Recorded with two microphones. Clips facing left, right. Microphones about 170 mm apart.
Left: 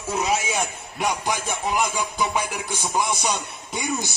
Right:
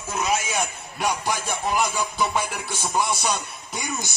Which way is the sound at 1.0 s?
15° left (ahead or behind).